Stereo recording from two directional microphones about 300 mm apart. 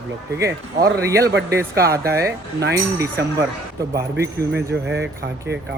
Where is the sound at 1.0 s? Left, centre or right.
Centre.